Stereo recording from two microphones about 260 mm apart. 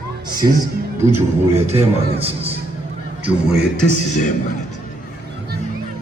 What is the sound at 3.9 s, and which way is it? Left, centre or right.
Speech, left.